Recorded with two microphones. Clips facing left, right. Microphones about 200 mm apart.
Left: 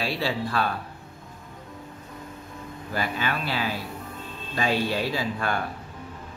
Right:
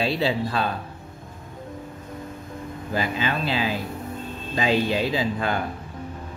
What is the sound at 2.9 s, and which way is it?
Speech, 20° right (ahead or behind).